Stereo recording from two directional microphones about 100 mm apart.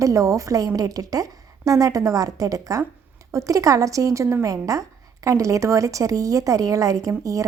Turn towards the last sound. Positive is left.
turn(degrees=-35)  # may be behind; listen again after turning